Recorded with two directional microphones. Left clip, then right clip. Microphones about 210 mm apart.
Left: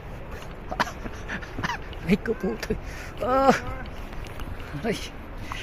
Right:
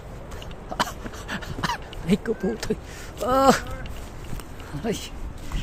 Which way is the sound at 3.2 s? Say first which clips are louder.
Right 2 dB; 30° right (ahead or behind).